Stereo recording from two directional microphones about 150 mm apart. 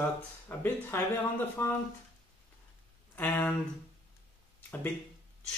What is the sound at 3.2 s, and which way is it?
Speech, 10° left (ahead or behind).